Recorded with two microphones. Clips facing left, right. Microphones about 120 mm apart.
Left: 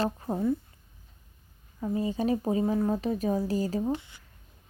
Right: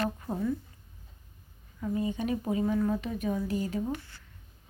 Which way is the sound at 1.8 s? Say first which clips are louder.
Left 2 dB; 30° left (ahead or behind).